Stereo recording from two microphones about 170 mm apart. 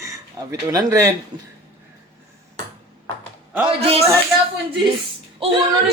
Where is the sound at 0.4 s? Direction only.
20° right (ahead or behind).